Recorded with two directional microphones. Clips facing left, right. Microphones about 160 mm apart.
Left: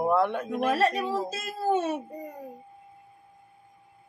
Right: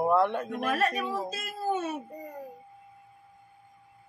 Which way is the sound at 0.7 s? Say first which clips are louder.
Left 3 dB; 30° left (ahead or behind).